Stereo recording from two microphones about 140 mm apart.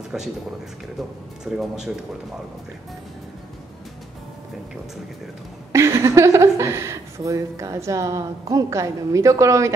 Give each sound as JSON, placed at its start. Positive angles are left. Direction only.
{"t": 1.4, "sound": "speech", "side_deg": -5}
{"t": 5.7, "sound": "speech", "side_deg": -20}